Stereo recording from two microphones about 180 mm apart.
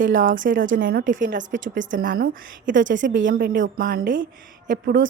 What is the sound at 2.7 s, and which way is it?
Speech, 90° right.